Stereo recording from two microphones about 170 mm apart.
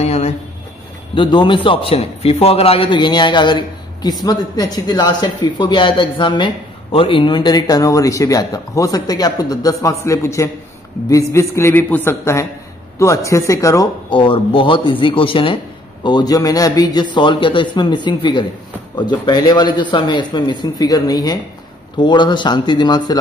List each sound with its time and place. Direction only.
0.0 s a sound: 40° left (ahead or behind)
1.1 s a man's voice: 30° left (ahead or behind)
14.2 s a man's voice: 30° left (ahead or behind)